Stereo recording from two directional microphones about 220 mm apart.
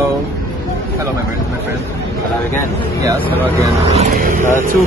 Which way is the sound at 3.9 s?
35° right (ahead or behind).